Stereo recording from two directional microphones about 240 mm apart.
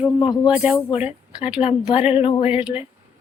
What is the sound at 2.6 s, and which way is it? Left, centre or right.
Speech, centre.